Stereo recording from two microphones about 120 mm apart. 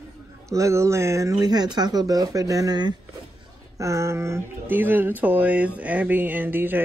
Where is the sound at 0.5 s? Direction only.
25° right (ahead or behind).